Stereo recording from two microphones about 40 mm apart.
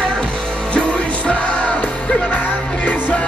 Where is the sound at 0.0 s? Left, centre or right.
Left.